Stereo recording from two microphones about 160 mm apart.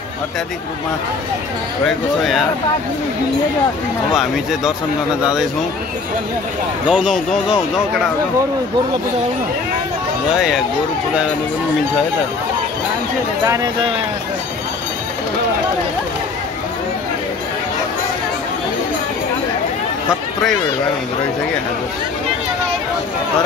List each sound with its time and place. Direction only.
4.1 s speech: centre (ahead or behind)
6.9 s speech: 5° right (ahead or behind)